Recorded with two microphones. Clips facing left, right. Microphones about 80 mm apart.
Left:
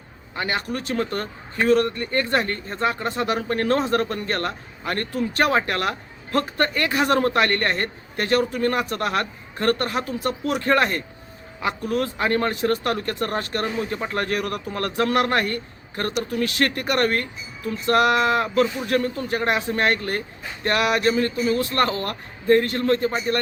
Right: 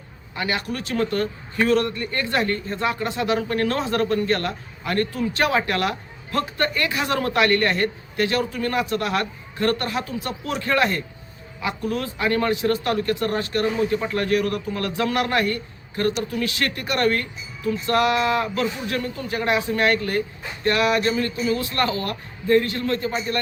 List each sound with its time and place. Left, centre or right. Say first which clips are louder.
0.3 s a man's voice: even; left